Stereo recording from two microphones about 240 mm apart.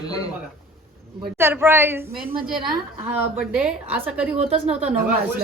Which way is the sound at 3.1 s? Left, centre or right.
Centre.